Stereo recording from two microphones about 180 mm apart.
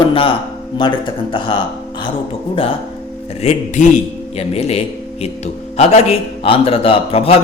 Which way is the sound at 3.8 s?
45° left (ahead or behind).